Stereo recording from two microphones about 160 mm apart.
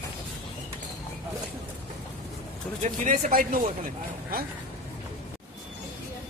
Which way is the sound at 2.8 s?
50° right (ahead or behind).